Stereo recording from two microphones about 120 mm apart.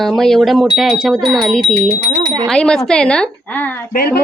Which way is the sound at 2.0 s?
30° right (ahead or behind).